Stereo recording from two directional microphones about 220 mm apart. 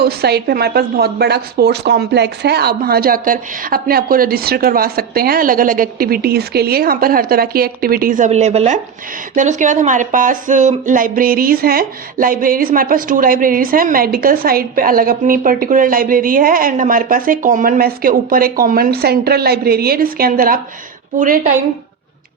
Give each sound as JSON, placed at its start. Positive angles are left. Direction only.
{"t": 0.0, "sound": "speech", "side_deg": -45}